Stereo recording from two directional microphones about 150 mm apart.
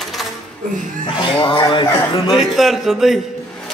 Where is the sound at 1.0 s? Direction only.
35° left (ahead or behind).